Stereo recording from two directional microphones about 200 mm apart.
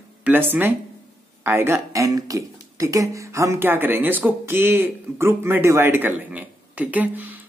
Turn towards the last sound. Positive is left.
turn(degrees=-10)  # may be behind; listen again after turning